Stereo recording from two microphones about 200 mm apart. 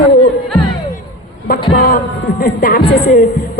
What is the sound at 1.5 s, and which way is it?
A woman's voice, 45° left (ahead or behind).